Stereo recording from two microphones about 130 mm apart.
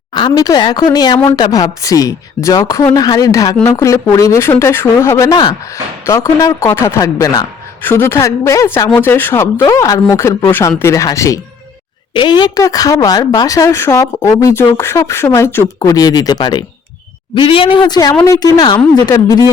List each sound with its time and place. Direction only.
0.1 s a woman's voice: 30° left (ahead or behind)
7.8 s a woman's voice: 15° left (ahead or behind)
12.1 s a woman's voice: 35° left (ahead or behind)
18.1 s a woman's voice: 15° left (ahead or behind)
18.3 s a woman's voice: 30° left (ahead or behind)